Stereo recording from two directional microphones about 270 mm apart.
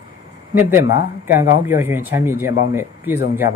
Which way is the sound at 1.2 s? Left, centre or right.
Centre.